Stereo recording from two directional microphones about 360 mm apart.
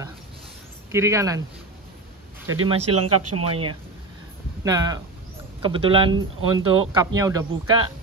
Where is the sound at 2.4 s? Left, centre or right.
Right.